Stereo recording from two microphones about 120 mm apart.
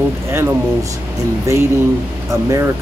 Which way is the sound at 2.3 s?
25° right (ahead or behind).